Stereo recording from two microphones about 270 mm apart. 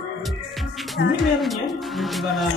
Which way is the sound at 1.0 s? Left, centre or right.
Left.